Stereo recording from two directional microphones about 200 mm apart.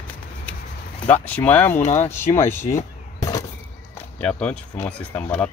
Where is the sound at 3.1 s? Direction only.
15° left (ahead or behind).